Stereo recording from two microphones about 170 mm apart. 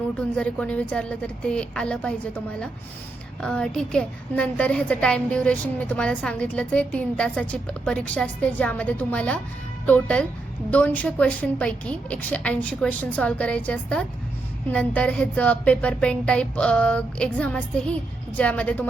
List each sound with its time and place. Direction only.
0.2 s a woman's voice: 5° left (ahead or behind)